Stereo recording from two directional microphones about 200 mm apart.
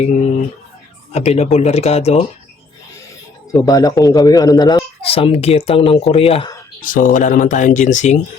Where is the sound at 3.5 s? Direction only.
15° left (ahead or behind).